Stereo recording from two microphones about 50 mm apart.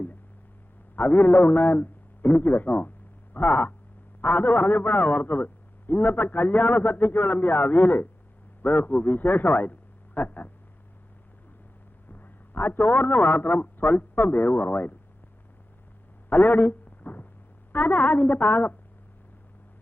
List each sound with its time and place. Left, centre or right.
0.9 s a man's voice: left
12.1 s a man's voice: left
16.3 s a sound: left
17.7 s a man's voice: left